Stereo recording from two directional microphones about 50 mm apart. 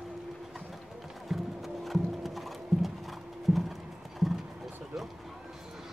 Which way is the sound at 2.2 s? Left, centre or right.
Centre.